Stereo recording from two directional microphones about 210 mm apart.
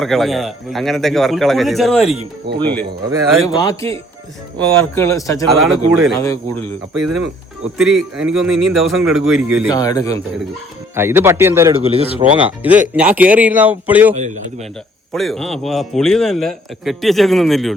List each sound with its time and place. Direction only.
0.0 s a man's voice: centre (ahead or behind)
5.5 s a man's voice: centre (ahead or behind)
6.1 s a man's voice: 15° left (ahead or behind)
6.9 s a man's voice: centre (ahead or behind)
9.7 s a man's voice: 15° left (ahead or behind)
10.9 s speech: 10° right (ahead or behind)
11.7 s speech: 30° right (ahead or behind)
12.3 s a man's voice: 5° right (ahead or behind)